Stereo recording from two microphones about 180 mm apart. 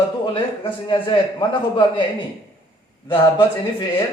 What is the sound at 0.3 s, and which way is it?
A man's voice, 25° left (ahead or behind).